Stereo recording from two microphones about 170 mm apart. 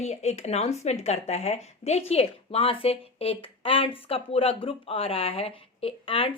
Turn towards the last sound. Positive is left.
turn(degrees=30)  # may be behind; listen again after turning